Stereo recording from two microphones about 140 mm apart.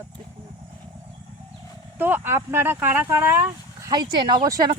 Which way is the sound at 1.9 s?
15° right (ahead or behind).